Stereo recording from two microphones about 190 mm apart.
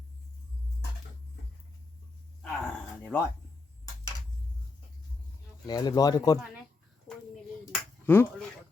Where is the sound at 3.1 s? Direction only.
10° left (ahead or behind).